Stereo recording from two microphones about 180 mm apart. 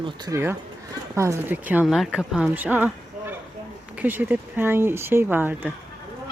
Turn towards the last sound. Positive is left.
turn(degrees=-10)  # may be behind; listen again after turning